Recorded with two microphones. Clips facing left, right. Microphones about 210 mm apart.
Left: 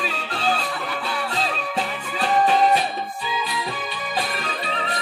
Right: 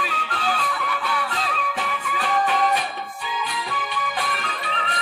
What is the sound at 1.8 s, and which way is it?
Music, 30° left (ahead or behind).